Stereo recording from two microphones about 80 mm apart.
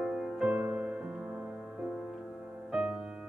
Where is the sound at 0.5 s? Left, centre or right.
Right.